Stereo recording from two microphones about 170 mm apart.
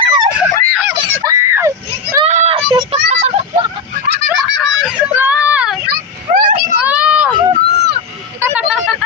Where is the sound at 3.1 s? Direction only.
40° right (ahead or behind).